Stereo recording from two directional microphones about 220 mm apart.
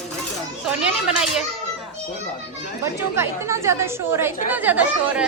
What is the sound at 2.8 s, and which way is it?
Speech, 10° right (ahead or behind).